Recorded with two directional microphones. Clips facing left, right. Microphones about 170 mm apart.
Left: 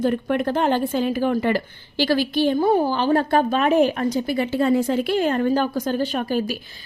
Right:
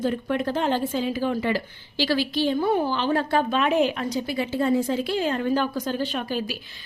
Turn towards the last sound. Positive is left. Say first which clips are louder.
# left 5 dB
turn(degrees=45)  # may be behind; listen again after turning